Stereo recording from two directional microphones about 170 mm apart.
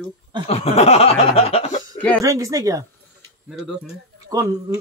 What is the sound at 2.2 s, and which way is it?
Speech, 20° right (ahead or behind).